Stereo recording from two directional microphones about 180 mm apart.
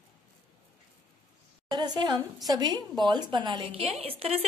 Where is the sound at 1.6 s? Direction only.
25° right (ahead or behind).